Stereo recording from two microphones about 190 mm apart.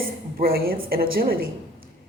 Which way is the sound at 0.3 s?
50° right (ahead or behind).